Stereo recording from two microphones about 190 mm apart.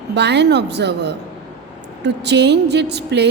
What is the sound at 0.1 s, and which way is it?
A woman's voice, 65° right (ahead or behind).